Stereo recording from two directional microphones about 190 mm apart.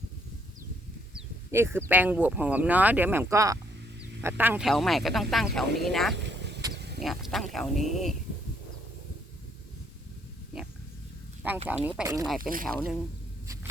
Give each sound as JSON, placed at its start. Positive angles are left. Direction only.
{"t": 1.1, "sound": "speech", "side_deg": -15}
{"t": 6.2, "sound": "vehicle", "side_deg": -65}
{"t": 6.7, "sound": "a sound", "side_deg": -60}
{"t": 7.0, "sound": "speech", "side_deg": 0}
{"t": 11.4, "sound": "speech", "side_deg": -10}
{"t": 12.4, "sound": "speech", "side_deg": -50}
{"t": 12.6, "sound": "speech", "side_deg": 0}